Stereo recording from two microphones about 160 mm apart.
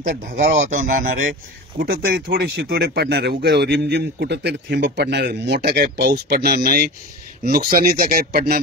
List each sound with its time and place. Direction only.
0.0 s speech: 50° right (ahead or behind)
1.8 s speech: 70° right (ahead or behind)